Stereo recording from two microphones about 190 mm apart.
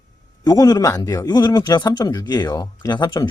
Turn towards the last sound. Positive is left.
turn(degrees=20)  # may be behind; listen again after turning